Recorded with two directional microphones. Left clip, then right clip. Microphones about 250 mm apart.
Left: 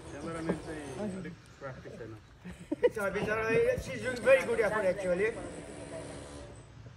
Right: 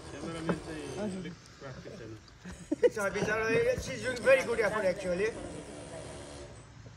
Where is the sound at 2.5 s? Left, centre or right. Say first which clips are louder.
Right 2 dB; right.